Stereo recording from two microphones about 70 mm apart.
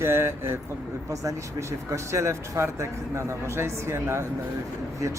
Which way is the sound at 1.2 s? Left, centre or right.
Right.